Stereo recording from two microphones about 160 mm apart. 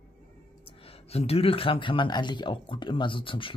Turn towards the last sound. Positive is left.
turn(degrees=30)  # may be behind; listen again after turning